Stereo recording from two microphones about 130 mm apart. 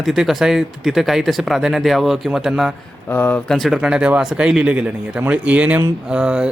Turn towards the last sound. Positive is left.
turn(degrees=-10)  # may be behind; listen again after turning